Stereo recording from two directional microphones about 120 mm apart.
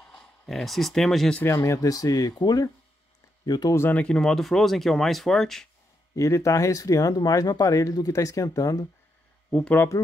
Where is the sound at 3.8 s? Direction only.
15° left (ahead or behind).